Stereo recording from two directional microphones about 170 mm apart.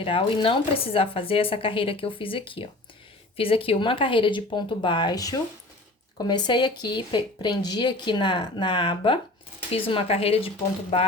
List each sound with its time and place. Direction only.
0.0 s speech: 30° left (ahead or behind)